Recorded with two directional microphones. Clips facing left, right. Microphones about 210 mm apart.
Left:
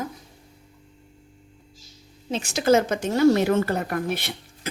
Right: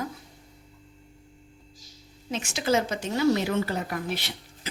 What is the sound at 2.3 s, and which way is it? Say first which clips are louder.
Speech: left 6 dB; 35° left (ahead or behind).